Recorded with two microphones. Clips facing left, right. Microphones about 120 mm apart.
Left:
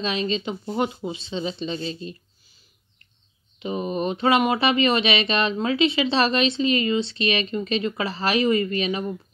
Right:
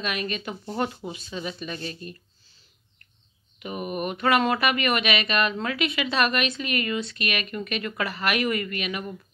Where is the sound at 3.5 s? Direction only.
25° left (ahead or behind).